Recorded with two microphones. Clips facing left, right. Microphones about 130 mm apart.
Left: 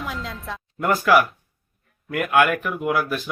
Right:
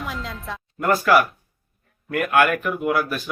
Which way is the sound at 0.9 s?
15° left (ahead or behind).